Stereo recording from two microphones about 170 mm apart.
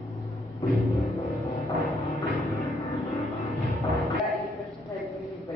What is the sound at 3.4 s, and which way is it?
Music, centre (ahead or behind).